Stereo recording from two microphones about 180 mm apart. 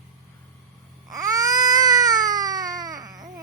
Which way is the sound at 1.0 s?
20° right (ahead or behind).